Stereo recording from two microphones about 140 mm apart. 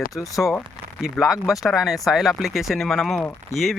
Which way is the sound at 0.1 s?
25° left (ahead or behind).